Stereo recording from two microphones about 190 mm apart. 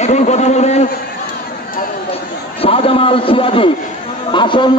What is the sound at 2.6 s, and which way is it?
A man's voice, 30° left (ahead or behind).